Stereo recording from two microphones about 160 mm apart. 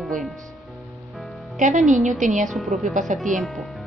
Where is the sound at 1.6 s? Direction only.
55° right (ahead or behind).